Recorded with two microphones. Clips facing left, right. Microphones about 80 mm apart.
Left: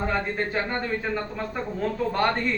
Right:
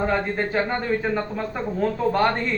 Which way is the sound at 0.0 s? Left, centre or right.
Centre.